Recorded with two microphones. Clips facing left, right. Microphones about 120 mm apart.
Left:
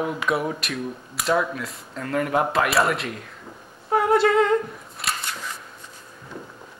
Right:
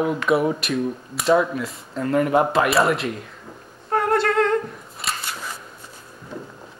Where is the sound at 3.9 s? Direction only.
5° left (ahead or behind).